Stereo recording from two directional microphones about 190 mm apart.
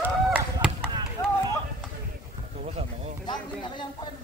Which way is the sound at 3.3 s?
25° left (ahead or behind).